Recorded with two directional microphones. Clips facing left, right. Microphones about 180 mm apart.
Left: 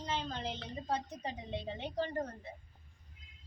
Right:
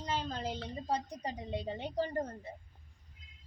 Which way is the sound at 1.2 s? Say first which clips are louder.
Right 2 dB; 40° right (ahead or behind).